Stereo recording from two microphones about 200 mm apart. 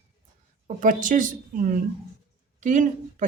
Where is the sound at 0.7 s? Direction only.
40° right (ahead or behind).